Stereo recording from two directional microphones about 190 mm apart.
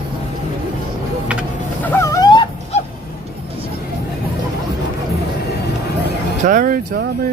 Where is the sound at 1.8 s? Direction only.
15° left (ahead or behind).